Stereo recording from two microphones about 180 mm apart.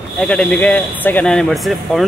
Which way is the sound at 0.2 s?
5° left (ahead or behind).